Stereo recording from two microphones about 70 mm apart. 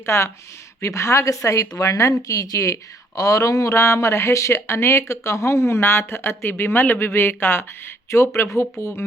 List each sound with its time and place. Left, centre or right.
0.0 s speech: left
8.1 s speech: left